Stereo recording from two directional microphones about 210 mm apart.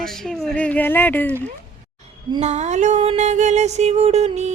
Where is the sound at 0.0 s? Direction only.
Centre (ahead or behind).